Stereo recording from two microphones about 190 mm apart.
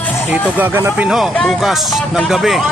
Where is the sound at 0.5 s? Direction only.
10° right (ahead or behind).